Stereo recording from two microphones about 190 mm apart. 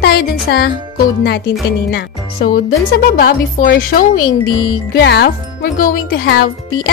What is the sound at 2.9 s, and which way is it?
Speech, 50° left (ahead or behind).